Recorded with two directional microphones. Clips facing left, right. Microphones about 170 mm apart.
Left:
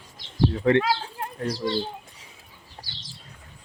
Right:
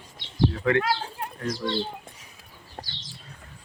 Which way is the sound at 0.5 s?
30° left (ahead or behind).